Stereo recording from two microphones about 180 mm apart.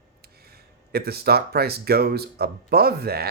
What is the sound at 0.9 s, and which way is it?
Speech, 60° right (ahead or behind).